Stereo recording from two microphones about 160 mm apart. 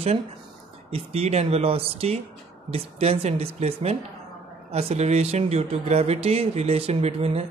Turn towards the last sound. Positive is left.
turn(degrees=-40)  # may be behind; listen again after turning